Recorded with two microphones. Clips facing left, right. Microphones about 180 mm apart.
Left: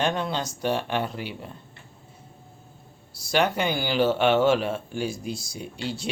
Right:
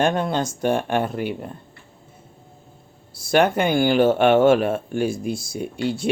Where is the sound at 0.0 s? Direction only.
50° right (ahead or behind).